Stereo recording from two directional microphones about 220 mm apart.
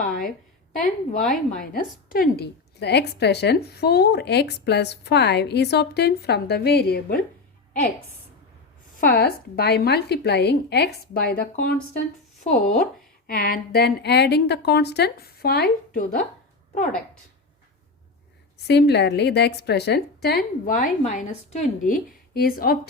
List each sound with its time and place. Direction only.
0.0 s a sound: 40° left (ahead or behind)
1.3 s a woman's voice: 40° left (ahead or behind)
9.0 s a woman's voice: 45° left (ahead or behind)
18.7 s a woman's voice: 50° left (ahead or behind)